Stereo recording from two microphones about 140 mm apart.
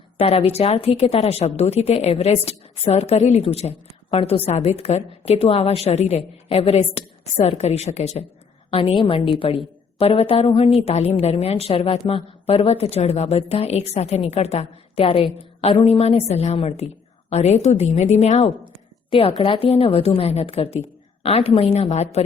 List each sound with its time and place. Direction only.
0.2 s a woman's voice: 45° left (ahead or behind)